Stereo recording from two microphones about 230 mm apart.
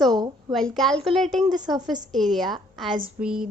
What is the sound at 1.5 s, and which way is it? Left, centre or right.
Speech, centre.